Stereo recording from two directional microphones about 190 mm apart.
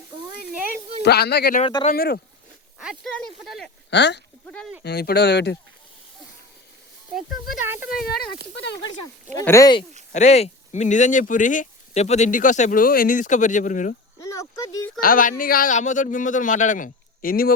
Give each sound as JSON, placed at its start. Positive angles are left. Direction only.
{"t": 1.0, "sound": "speech", "side_deg": 60}
{"t": 1.6, "sound": "speech", "side_deg": 30}
{"t": 1.9, "sound": "speech", "side_deg": 50}
{"t": 2.7, "sound": "speech", "side_deg": -5}
{"t": 3.8, "sound": "speech", "side_deg": 65}
{"t": 4.4, "sound": "speech", "side_deg": 5}
{"t": 4.8, "sound": "speech", "side_deg": 60}
{"t": 7.1, "sound": "speech", "side_deg": -5}
{"t": 8.0, "sound": "speech", "side_deg": 55}
{"t": 8.5, "sound": "speech", "side_deg": 65}
{"t": 9.4, "sound": "speech", "side_deg": 15}
{"t": 10.1, "sound": "speech", "side_deg": 35}
{"t": 14.2, "sound": "a sound", "side_deg": 15}
{"t": 15.0, "sound": "speech", "side_deg": 45}